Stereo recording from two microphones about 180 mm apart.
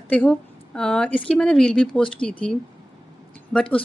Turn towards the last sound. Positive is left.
turn(degrees=5)  # may be behind; listen again after turning